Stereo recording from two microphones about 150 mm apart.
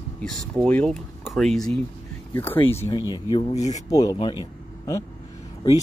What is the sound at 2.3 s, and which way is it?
Speech, 15° left (ahead or behind).